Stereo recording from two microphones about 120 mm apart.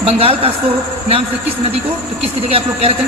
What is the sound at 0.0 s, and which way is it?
Speech, 50° right (ahead or behind).